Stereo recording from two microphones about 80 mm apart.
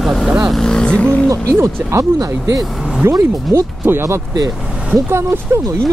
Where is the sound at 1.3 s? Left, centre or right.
Right.